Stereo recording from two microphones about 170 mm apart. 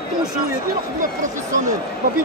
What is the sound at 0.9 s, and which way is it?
Speech, 50° right (ahead or behind).